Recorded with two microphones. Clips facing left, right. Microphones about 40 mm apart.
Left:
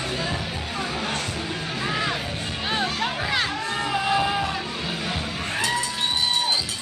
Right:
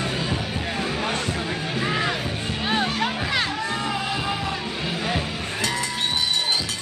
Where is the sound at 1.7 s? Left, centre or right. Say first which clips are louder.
Right 2 dB; centre.